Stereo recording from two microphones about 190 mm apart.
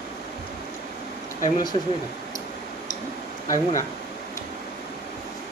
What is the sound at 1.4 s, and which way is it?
Speech, 20° left (ahead or behind).